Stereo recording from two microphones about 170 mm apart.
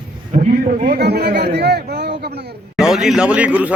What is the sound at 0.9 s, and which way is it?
Speech, 70° right (ahead or behind).